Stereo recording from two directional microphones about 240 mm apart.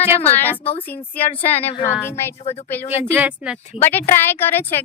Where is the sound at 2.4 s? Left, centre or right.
Left.